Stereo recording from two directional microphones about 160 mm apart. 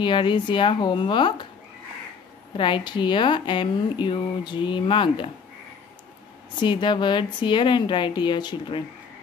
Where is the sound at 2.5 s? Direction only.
30° left (ahead or behind).